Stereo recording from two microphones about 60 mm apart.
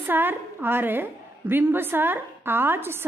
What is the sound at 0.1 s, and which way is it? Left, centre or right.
A woman's voice, right.